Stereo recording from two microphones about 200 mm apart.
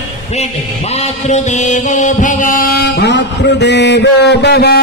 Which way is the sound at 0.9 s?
35° left (ahead or behind).